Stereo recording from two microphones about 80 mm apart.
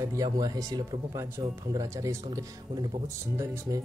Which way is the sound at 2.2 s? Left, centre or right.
Right.